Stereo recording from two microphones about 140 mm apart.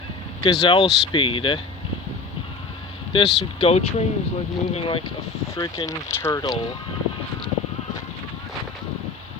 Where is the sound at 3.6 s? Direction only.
50° left (ahead or behind).